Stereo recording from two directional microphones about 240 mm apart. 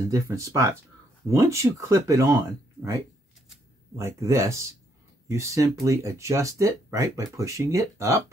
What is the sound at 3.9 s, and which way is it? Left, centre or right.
Speech, centre.